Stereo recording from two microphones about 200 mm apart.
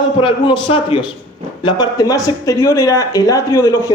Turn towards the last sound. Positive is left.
turn(degrees=15)  # may be behind; listen again after turning